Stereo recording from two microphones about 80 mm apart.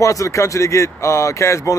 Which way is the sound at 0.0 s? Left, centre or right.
Left.